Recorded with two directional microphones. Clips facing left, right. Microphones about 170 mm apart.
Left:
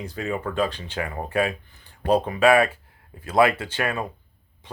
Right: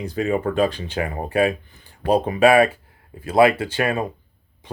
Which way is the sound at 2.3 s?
15° right (ahead or behind).